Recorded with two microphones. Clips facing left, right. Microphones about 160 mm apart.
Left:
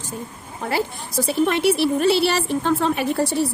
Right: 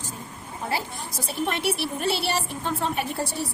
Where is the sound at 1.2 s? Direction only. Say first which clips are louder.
Left 8 dB; 90° left.